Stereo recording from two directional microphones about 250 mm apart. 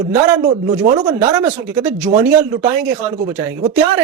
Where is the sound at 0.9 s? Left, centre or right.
Centre.